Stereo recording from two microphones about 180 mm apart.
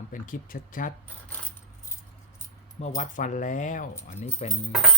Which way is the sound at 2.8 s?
40° left (ahead or behind).